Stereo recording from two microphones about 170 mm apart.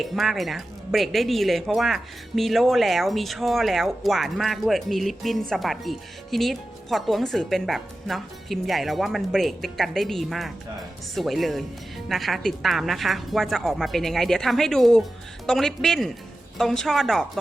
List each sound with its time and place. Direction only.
0.0 s speech: centre (ahead or behind)